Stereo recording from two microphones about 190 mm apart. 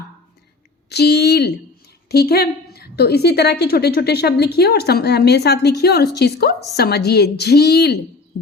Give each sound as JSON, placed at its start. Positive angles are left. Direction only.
{"t": 0.9, "sound": "a woman's voice", "side_deg": 60}